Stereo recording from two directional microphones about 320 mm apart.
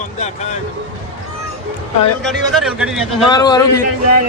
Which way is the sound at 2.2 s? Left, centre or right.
Centre.